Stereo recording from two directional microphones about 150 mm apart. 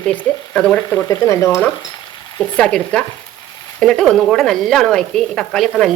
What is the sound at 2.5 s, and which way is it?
A woman's voice, 5° left (ahead or behind).